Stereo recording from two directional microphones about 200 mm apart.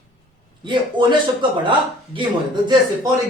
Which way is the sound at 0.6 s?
25° right (ahead or behind).